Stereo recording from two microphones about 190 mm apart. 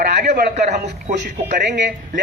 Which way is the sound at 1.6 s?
65° right (ahead or behind).